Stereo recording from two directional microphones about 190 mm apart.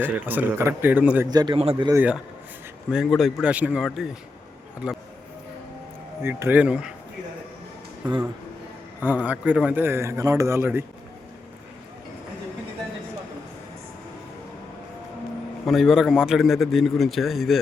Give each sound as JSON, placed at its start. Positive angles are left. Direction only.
{"t": 0.0, "sound": "speech", "side_deg": -10}
{"t": 1.3, "sound": "a man's voice", "side_deg": -20}
{"t": 1.5, "sound": "speech", "side_deg": -30}
{"t": 1.9, "sound": "a man's voice", "side_deg": -10}
{"t": 6.2, "sound": "speech", "side_deg": -10}
{"t": 9.2, "sound": "speech", "side_deg": -5}
{"t": 15.6, "sound": "a man's voice", "side_deg": 0}